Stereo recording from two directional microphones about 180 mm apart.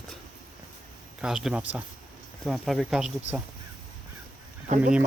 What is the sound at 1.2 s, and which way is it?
Speech, 5° right (ahead or behind).